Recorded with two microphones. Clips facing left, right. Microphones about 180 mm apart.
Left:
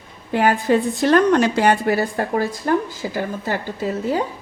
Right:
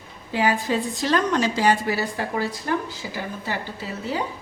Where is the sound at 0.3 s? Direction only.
60° left (ahead or behind).